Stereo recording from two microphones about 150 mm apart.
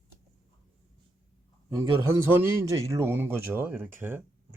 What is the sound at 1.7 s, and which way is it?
A man's voice, 15° right (ahead or behind).